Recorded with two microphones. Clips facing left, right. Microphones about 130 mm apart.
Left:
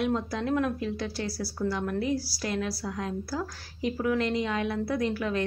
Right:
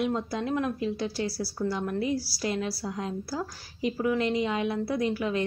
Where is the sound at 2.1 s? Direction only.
45° left (ahead or behind).